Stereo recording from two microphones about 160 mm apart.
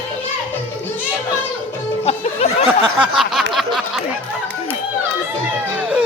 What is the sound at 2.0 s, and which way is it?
Speech, 40° left (ahead or behind).